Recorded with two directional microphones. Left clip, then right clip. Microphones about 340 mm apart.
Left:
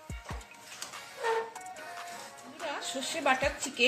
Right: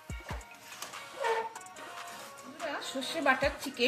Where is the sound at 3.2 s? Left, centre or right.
Centre.